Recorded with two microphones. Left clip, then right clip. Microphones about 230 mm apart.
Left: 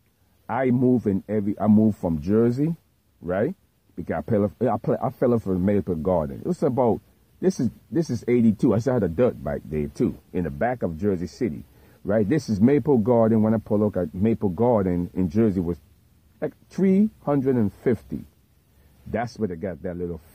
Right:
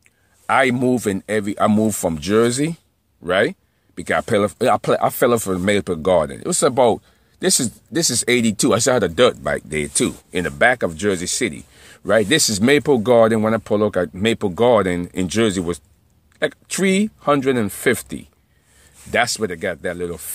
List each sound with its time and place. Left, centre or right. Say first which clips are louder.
0.5 s speech: right 6 dB; centre